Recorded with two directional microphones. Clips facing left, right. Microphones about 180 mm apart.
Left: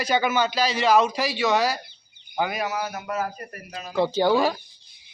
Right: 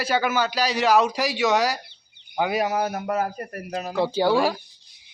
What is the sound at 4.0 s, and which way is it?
Speech, 10° right (ahead or behind).